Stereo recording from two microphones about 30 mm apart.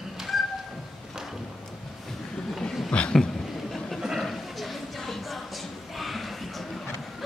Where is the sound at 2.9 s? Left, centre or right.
Left.